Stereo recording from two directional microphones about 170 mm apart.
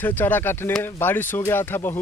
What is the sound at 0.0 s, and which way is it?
Speech, 10° left (ahead or behind).